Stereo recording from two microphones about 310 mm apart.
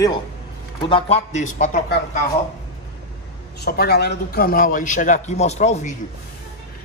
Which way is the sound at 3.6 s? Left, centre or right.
Left.